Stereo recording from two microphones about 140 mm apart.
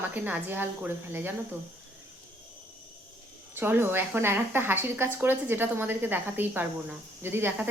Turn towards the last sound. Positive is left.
turn(degrees=-15)  # may be behind; listen again after turning